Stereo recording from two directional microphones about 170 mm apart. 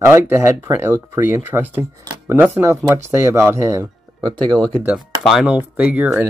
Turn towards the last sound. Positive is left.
turn(degrees=-10)  # may be behind; listen again after turning